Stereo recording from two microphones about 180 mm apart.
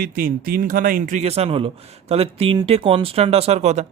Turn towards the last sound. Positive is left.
turn(degrees=-40)  # may be behind; listen again after turning